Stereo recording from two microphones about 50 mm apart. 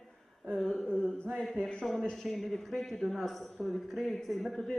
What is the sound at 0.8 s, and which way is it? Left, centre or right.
Mantra, centre.